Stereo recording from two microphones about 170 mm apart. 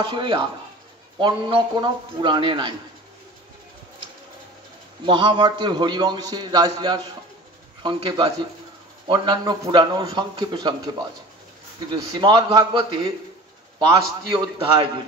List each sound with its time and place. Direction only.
0.0 s a man's voice: 30° right (ahead or behind)
5.0 s a man's voice: 30° right (ahead or behind)
11.9 s a man's voice: 25° right (ahead or behind)